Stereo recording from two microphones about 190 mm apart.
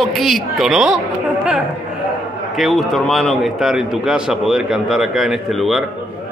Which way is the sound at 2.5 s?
Centre (ahead or behind).